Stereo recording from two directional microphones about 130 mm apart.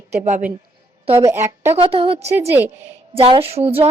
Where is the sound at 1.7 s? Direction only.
50° right (ahead or behind).